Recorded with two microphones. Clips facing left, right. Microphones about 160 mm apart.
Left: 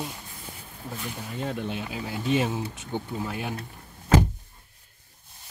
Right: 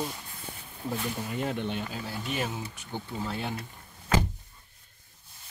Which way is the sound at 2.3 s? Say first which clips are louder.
Left 9 dB; 25° left (ahead or behind).